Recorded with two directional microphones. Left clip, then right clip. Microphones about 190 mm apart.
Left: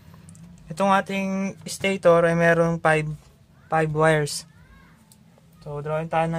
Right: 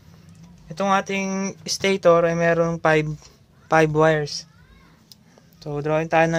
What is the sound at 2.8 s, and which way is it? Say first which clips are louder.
Speech: right 2 dB; 15° right (ahead or behind).